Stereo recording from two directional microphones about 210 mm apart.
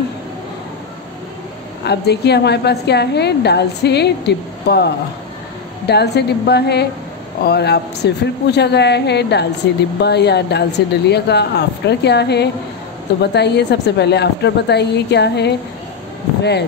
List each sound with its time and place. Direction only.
1.9 s a woman's voice: 50° left (ahead or behind)